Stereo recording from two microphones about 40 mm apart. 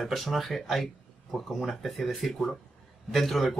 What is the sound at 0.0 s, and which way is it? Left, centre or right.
Speech, centre.